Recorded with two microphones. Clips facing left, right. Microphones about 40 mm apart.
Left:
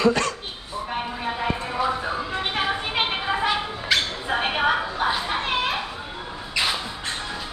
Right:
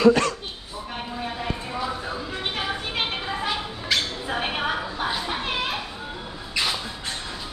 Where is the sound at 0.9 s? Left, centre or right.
Centre.